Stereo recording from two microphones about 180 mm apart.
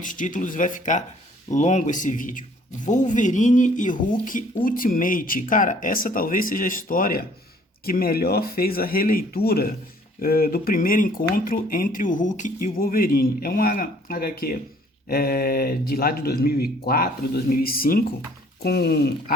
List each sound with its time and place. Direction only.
0.0 s speech: 45° left (ahead or behind)